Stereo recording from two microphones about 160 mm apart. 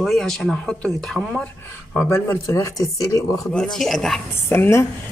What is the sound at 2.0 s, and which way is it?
Speech, 15° left (ahead or behind).